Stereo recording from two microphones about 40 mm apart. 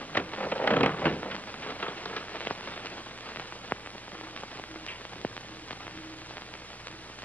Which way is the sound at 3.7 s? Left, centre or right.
Left.